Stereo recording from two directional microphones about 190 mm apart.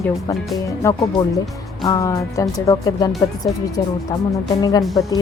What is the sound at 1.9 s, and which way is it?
Speech, 20° left (ahead or behind).